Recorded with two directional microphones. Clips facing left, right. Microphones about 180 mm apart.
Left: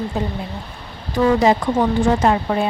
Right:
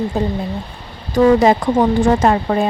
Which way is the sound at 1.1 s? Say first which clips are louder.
Right 4 dB; 50° right (ahead or behind).